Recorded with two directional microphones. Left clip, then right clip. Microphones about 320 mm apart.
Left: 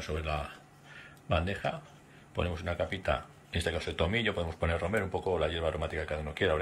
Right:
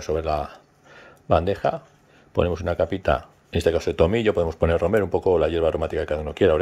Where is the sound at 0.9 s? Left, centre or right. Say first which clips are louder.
Right 12 dB; centre.